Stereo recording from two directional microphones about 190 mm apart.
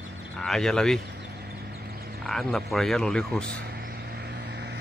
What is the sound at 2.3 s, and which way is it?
Speech, centre (ahead or behind).